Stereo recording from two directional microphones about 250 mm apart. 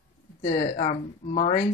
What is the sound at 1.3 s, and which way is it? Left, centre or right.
Speech, left.